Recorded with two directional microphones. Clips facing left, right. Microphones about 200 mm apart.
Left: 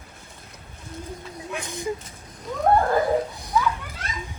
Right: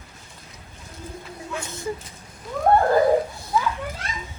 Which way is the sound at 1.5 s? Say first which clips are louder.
Left 1 dB; 15° left (ahead or behind).